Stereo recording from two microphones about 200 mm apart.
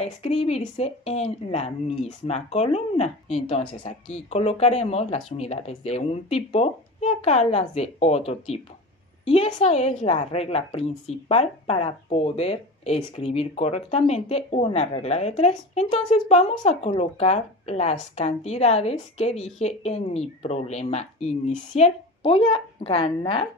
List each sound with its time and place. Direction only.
0.0 s a woman's voice: 30° left (ahead or behind)
9.2 s a woman's voice: 30° left (ahead or behind)